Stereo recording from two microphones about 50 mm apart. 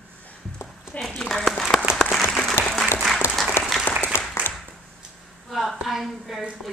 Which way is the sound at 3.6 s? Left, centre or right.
Left.